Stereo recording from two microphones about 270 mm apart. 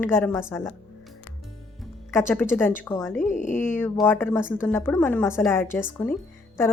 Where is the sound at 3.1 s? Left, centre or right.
Left.